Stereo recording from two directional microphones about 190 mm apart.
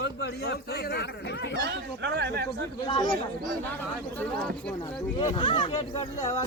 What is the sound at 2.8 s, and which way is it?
Speech, 25° left (ahead or behind).